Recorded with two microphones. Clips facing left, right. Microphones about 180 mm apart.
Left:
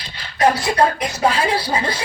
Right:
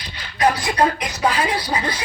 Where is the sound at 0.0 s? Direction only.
25° left (ahead or behind).